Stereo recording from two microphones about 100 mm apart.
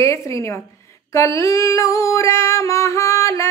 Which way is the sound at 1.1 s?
30° left (ahead or behind).